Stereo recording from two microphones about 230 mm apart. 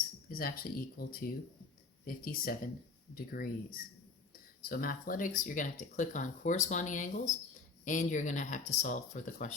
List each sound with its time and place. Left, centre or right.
0.3 s speech: left